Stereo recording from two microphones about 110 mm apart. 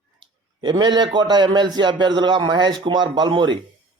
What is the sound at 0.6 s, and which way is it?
A man's voice, 45° right (ahead or behind).